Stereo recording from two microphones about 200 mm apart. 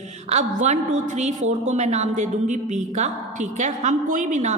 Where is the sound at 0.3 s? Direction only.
35° right (ahead or behind).